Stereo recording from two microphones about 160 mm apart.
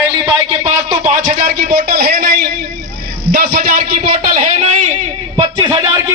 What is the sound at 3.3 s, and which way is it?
Speech, 60° right (ahead or behind).